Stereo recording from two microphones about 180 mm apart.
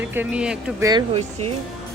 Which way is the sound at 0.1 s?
10° right (ahead or behind).